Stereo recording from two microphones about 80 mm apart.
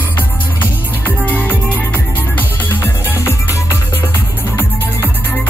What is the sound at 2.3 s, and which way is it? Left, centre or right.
Music, left.